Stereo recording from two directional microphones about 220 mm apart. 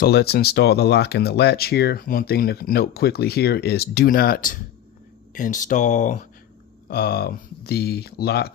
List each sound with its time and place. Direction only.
0.0 s speech: 45° left (ahead or behind)
6.8 s speech: 45° left (ahead or behind)